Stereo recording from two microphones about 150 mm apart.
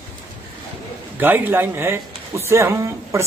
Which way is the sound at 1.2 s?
15° right (ahead or behind).